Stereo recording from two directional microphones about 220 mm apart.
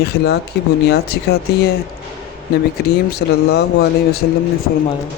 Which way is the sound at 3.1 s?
45° left (ahead or behind).